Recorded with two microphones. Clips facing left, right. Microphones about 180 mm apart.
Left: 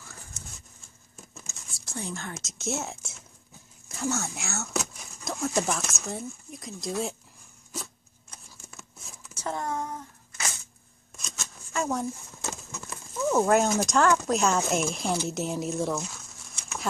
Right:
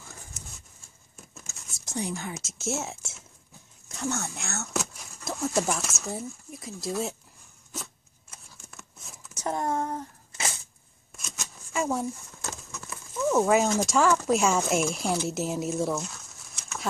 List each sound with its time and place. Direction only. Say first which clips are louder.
1.7 s whispering: right 4 dB; 15° right (ahead or behind)
2.3 s speech: right 1 dB; 5° right (ahead or behind)
7.7 s zipper: left 1 dB; centre (ahead or behind)
9.4 s a sound: right 3 dB; 20° right (ahead or behind)
11.2 s a sound: even; 10° right (ahead or behind)
13.1 s speech: even; centre (ahead or behind)